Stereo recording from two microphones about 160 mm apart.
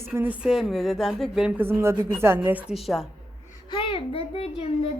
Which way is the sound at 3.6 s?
35° left (ahead or behind).